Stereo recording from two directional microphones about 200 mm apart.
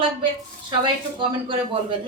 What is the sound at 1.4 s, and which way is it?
Speech, 25° right (ahead or behind).